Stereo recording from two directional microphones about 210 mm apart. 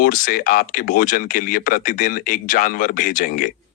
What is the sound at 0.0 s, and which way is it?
Speech, 40° left (ahead or behind).